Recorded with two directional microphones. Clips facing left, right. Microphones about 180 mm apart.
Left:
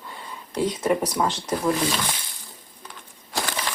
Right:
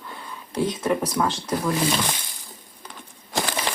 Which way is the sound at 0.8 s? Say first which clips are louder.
Left 1 dB; 10° left (ahead or behind).